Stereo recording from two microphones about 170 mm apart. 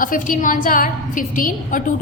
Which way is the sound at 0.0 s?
50° left (ahead or behind).